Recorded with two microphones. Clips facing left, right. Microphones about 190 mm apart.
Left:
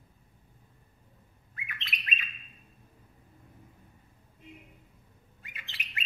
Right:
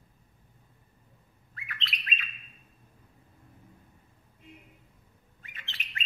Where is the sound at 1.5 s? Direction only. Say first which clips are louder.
Right 2 dB; 15° left (ahead or behind).